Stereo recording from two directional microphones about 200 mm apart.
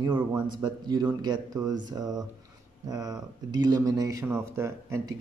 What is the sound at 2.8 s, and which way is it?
Speech, 15° right (ahead or behind).